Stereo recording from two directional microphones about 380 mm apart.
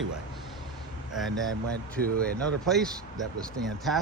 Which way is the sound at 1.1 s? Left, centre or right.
Centre.